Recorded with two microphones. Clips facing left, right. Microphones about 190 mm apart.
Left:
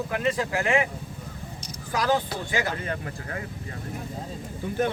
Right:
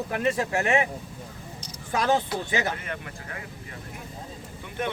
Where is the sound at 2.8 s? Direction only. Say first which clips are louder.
Left 4 dB; 35° left (ahead or behind).